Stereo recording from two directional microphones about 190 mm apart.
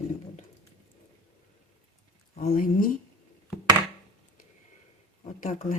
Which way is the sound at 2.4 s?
45° left (ahead or behind).